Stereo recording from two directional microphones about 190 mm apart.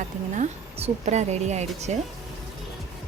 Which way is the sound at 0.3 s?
35° right (ahead or behind).